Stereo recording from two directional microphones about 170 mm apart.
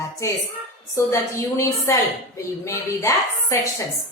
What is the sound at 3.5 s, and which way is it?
Speech, 15° left (ahead or behind).